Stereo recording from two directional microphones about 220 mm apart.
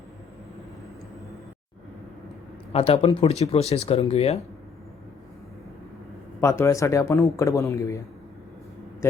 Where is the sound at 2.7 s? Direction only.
25° left (ahead or behind).